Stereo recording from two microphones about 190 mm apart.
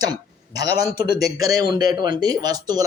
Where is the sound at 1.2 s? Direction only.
20° right (ahead or behind).